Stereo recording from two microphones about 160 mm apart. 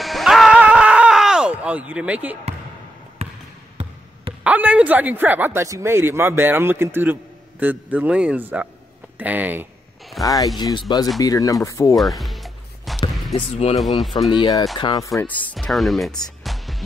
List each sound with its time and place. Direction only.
0.0 s a sound: centre (ahead or behind)
4.4 s speech: 10° right (ahead or behind)
10.2 s speech: 20° left (ahead or behind)
12.2 s music: centre (ahead or behind)
13.3 s speech: 40° left (ahead or behind)
14.3 s speech: 25° left (ahead or behind)
15.5 s music: centre (ahead or behind)